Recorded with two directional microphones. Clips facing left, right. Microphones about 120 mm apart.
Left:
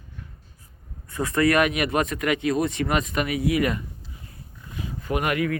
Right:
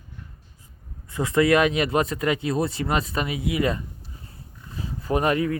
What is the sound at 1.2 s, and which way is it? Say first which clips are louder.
Speech: right 2 dB; 25° right (ahead or behind).